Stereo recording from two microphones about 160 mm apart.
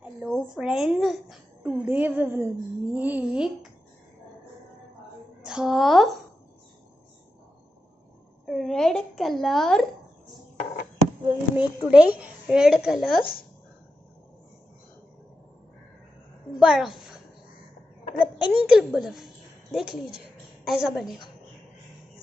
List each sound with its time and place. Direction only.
0.0 s a woman's voice: 5° right (ahead or behind)
5.4 s a child's voice: 5° right (ahead or behind)
8.5 s a woman's voice: centre (ahead or behind)
11.5 s a woman's voice: 10° right (ahead or behind)
13.2 s speech: 65° left (ahead or behind)
16.5 s a woman's voice: centre (ahead or behind)
18.2 s a woman's voice: 10° right (ahead or behind)